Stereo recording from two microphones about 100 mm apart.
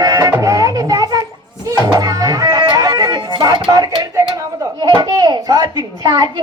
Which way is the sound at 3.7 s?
45° right (ahead or behind).